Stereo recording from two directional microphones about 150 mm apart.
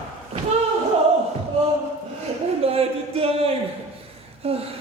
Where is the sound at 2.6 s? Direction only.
40° right (ahead or behind).